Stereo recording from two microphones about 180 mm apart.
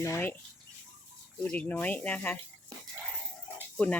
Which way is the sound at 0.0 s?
15° left (ahead or behind).